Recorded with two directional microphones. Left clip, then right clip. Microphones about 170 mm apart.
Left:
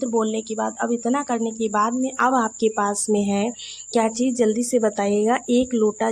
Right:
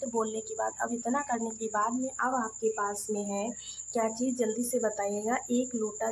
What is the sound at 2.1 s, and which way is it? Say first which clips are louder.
A woman's voice: left 14 dB; 55° left (ahead or behind).